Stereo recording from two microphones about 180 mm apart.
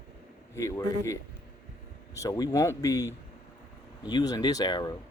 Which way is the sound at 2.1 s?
20° left (ahead or behind).